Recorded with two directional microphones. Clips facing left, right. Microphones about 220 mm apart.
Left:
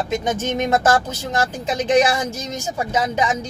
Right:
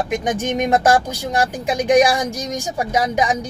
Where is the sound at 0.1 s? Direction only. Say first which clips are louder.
Right 1 dB; 15° right (ahead or behind).